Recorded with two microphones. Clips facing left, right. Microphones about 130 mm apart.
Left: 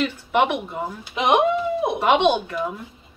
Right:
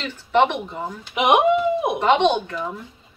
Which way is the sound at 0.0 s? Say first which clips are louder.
Right 1 dB; 10° left (ahead or behind).